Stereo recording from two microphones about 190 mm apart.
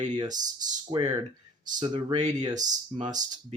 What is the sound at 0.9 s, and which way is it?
Speech, 30° right (ahead or behind).